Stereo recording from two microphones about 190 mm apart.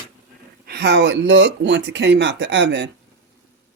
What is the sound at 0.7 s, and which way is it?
Speech, 60° right (ahead or behind).